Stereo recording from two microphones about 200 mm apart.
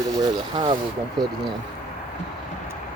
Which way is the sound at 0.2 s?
25° right (ahead or behind).